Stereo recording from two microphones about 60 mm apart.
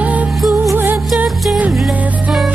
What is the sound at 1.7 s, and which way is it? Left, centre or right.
Music, centre.